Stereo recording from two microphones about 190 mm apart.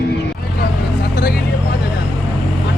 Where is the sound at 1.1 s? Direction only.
50° left (ahead or behind).